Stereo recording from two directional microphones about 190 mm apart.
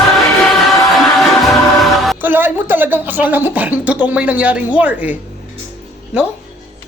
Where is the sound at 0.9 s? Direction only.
Centre (ahead or behind).